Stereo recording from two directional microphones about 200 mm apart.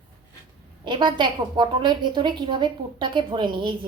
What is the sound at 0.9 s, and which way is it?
A woman's voice, 25° right (ahead or behind).